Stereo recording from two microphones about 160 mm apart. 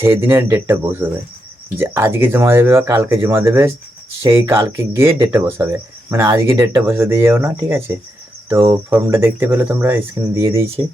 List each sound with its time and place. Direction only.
0.0 s speech: 15° right (ahead or behind)